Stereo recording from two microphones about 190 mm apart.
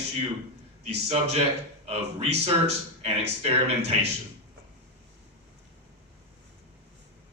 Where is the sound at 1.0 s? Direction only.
35° right (ahead or behind).